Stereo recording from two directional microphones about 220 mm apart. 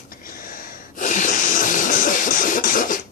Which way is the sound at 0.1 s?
40° left (ahead or behind).